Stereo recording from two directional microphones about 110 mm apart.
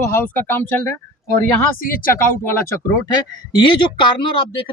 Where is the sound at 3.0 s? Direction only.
45° left (ahead or behind).